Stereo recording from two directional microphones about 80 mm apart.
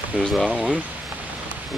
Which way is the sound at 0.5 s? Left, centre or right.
Centre.